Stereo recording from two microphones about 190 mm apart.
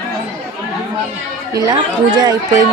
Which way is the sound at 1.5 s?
20° right (ahead or behind).